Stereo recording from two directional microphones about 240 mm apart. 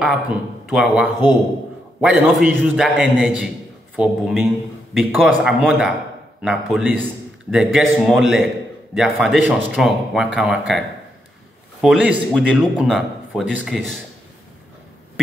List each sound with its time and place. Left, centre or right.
0.0 s a man's voice: centre
11.8 s a man's voice: centre